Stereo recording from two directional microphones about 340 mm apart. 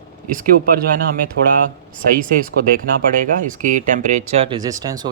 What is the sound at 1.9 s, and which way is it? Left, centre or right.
Speech, right.